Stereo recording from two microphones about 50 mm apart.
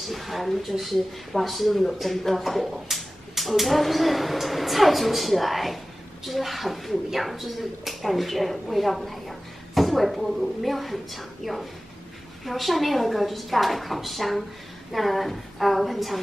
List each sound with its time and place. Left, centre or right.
0.0 s speech: centre